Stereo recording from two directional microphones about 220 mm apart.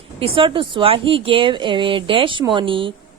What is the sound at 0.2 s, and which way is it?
Speech, 25° right (ahead or behind).